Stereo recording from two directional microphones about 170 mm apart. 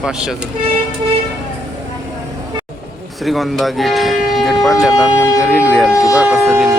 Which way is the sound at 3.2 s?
Centre (ahead or behind).